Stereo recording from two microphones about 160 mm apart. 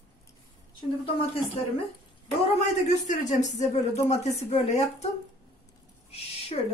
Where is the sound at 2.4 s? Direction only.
45° left (ahead or behind).